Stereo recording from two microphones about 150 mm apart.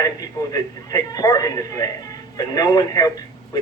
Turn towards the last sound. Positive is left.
turn(degrees=25)  # may be behind; listen again after turning